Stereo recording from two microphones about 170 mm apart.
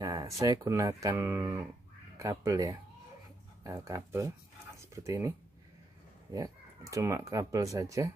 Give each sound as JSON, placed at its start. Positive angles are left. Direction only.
{"t": 0.0, "sound": "speech", "side_deg": -20}
{"t": 6.3, "sound": "speech", "side_deg": -20}